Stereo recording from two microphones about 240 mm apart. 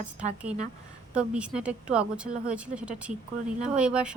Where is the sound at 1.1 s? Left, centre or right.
Centre.